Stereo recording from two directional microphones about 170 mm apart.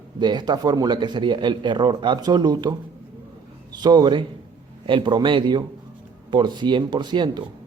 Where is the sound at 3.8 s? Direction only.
25° right (ahead or behind).